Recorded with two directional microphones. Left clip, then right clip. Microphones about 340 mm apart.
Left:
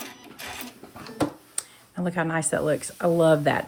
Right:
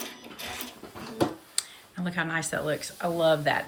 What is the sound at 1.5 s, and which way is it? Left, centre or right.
Speech, centre.